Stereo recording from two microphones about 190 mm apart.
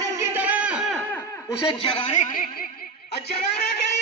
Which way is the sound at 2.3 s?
50° left (ahead or behind).